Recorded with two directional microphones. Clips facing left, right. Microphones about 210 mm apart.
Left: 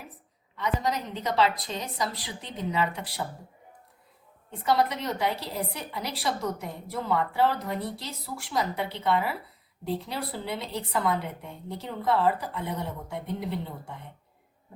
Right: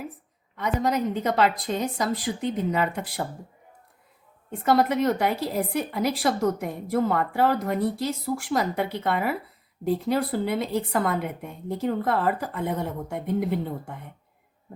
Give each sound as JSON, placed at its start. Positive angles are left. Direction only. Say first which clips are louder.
{"t": 0.6, "sound": "a woman's voice", "louder": "right 5 dB", "side_deg": -50}
{"t": 4.8, "sound": "a woman's voice", "louder": "right 5 dB", "side_deg": -50}